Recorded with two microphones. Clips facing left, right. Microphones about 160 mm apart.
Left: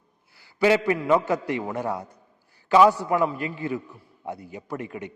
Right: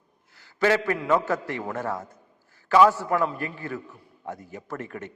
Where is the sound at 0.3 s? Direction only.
15° left (ahead or behind).